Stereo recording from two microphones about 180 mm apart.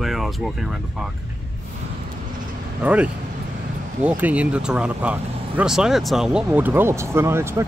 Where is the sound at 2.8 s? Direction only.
5° right (ahead or behind).